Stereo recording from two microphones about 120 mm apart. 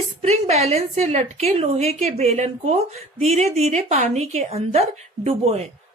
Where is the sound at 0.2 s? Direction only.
65° right (ahead or behind).